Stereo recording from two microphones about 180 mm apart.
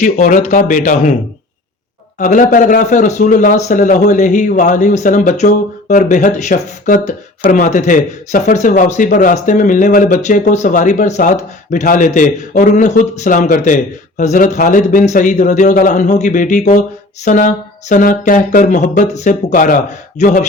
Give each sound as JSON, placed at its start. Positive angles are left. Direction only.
{"t": 0.0, "sound": "speech", "side_deg": 45}
{"t": 2.1, "sound": "speech", "side_deg": 45}